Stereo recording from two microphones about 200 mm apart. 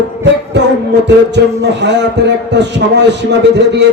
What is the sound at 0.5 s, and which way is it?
Music, 60° right (ahead or behind).